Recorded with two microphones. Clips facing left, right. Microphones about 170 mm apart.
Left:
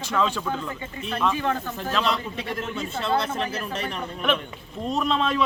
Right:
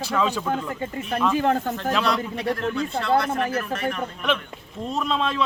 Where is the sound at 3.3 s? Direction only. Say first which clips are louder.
Right 4 dB; 55° right (ahead or behind).